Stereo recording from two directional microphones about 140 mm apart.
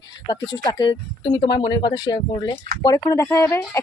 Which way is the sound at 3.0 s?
20° left (ahead or behind).